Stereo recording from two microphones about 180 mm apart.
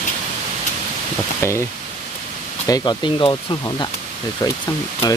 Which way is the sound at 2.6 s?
20° left (ahead or behind).